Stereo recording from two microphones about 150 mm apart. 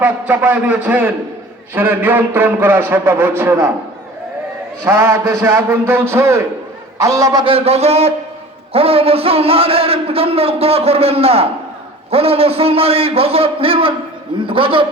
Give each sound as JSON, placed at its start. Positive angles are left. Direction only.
{"t": 0.0, "sound": "speech", "side_deg": -10}
{"t": 4.9, "sound": "a man's voice", "side_deg": -15}
{"t": 7.4, "sound": "a man's voice", "side_deg": -40}